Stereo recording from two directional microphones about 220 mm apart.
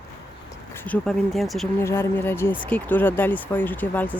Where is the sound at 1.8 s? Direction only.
10° left (ahead or behind).